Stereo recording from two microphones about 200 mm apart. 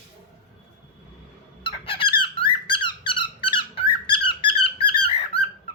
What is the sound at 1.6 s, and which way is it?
Squeak, 25° left (ahead or behind).